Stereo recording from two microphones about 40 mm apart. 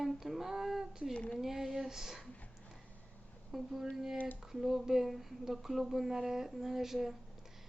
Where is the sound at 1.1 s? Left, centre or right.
Centre.